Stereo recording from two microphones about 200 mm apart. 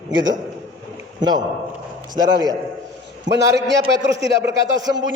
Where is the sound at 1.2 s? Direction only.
20° right (ahead or behind).